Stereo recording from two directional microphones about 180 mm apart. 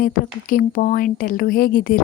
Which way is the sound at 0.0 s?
50° left (ahead or behind).